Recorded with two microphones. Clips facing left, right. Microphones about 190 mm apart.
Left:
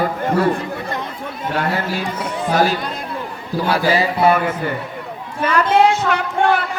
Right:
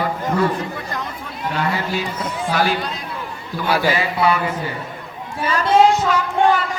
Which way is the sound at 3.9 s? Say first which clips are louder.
Left 6 dB; 40° left (ahead or behind).